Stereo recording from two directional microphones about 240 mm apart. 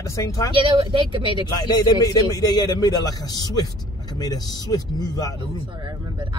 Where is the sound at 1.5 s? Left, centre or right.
Centre.